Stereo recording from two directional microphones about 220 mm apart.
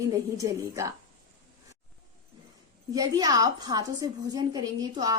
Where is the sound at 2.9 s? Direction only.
15° right (ahead or behind).